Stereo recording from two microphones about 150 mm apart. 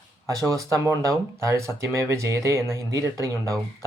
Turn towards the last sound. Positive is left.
turn(degrees=-20)  # may be behind; listen again after turning